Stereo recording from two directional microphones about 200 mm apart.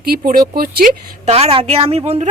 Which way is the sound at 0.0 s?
50° right (ahead or behind).